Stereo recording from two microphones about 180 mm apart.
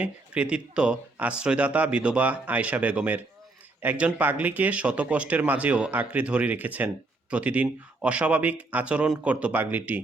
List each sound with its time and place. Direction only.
0.0 s speech: 5° right (ahead or behind)